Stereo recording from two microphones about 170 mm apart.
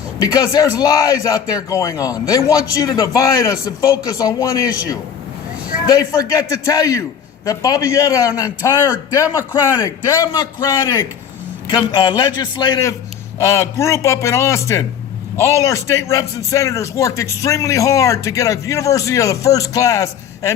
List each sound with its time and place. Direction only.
0.2 s a man's voice: 20° left (ahead or behind)